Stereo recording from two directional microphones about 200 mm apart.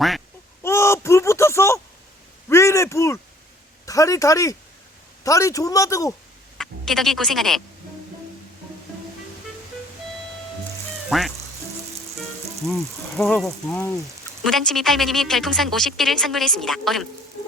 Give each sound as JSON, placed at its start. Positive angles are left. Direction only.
{"t": 0.6, "sound": "a sound", "side_deg": 15}
{"t": 3.8, "sound": "a man's voice", "side_deg": 15}
{"t": 6.6, "sound": "speech", "side_deg": 0}
{"t": 11.1, "sound": "a woman's voice", "side_deg": 0}
{"t": 12.6, "sound": "a woman's voice", "side_deg": 0}